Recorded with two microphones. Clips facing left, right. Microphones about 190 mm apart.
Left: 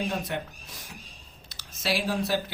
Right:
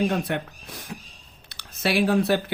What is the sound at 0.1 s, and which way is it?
Speech, 60° right (ahead or behind).